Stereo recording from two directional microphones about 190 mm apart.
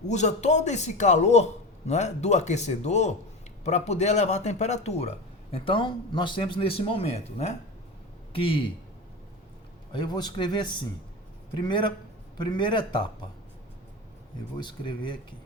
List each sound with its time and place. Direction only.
0.1 s speech: 35° left (ahead or behind)
9.9 s speech: 20° left (ahead or behind)
14.6 s speech: 25° left (ahead or behind)